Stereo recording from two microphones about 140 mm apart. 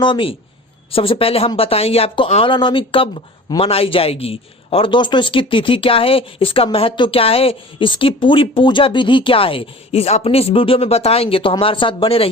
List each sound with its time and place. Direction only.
0.0 s a man's voice: 35° left (ahead or behind)